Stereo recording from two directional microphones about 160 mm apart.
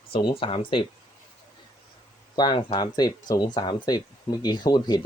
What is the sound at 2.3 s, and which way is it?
Speech, 25° left (ahead or behind).